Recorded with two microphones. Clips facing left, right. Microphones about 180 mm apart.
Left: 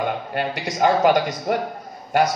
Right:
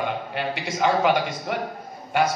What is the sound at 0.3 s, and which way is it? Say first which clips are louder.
A man's voice: left 3 dB; 45° left (ahead or behind).